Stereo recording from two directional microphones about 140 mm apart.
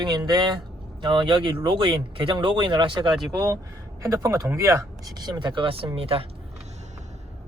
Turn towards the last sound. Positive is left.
turn(degrees=-40)  # may be behind; listen again after turning